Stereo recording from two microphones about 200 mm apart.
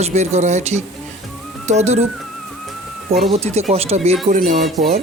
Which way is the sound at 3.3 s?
30° right (ahead or behind).